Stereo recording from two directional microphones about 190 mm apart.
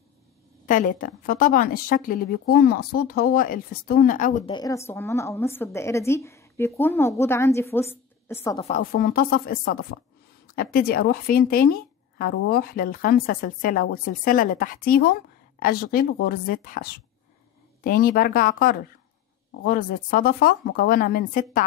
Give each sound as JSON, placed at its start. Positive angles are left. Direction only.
{"t": 0.7, "sound": "a woman's voice", "side_deg": 45}
{"t": 4.5, "sound": "a woman's voice", "side_deg": 20}
{"t": 8.5, "sound": "a woman's voice", "side_deg": 35}
{"t": 8.9, "sound": "a woman's voice", "side_deg": 50}